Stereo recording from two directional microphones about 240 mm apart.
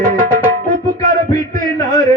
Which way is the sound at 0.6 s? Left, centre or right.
Right.